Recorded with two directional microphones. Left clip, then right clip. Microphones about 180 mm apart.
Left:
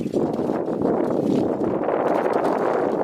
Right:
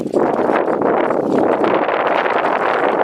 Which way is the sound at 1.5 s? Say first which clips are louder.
Right 8 dB; 15° right (ahead or behind).